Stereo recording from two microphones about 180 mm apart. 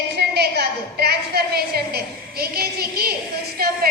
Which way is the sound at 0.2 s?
65° right (ahead or behind).